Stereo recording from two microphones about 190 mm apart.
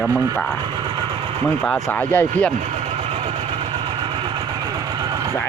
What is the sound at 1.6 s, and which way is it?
Speech, 10° left (ahead or behind).